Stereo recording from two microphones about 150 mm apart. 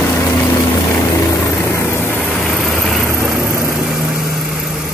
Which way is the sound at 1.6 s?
15° left (ahead or behind).